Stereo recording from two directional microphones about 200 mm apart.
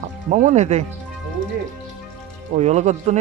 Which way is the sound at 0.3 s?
35° right (ahead or behind).